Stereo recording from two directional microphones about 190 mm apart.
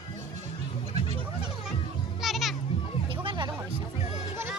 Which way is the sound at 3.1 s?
25° right (ahead or behind).